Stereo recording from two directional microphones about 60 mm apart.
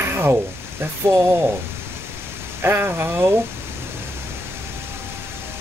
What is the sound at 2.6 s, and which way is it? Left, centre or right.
Speech, right.